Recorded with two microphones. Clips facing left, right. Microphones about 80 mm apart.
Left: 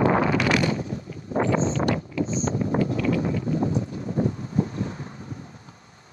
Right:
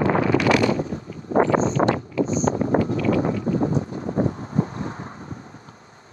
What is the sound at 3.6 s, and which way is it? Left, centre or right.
Wind noise, right.